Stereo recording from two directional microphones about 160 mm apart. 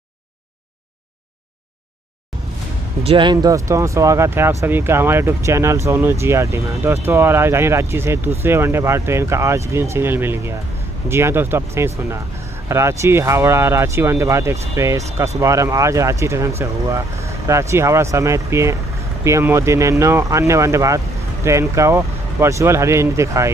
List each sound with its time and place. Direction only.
3.0 s speech: 35° right (ahead or behind); by 23.5 s 20° right (ahead or behind)